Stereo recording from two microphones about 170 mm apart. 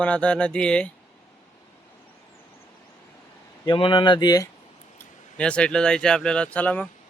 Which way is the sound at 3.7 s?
30° left (ahead or behind).